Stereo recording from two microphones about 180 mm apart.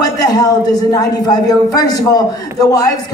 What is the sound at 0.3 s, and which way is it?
Speech, 20° left (ahead or behind).